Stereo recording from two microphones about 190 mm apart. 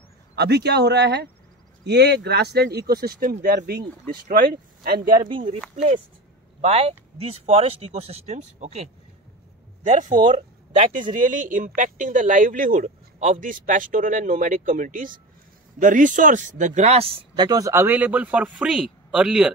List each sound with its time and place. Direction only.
0.4 s speech: 60° right (ahead or behind)
6.6 s speech: 30° right (ahead or behind)
10.2 s speech: 30° right (ahead or behind)
10.9 s speech: 45° right (ahead or behind); by 19.5 s 5° right (ahead or behind)